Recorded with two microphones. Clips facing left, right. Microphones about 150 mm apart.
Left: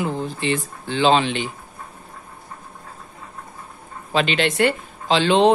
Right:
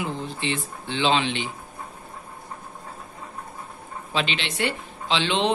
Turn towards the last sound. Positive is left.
turn(degrees=45)  # may be behind; listen again after turning